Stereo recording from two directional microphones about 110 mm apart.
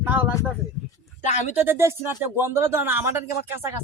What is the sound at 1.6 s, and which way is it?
A man's voice, 20° right (ahead or behind).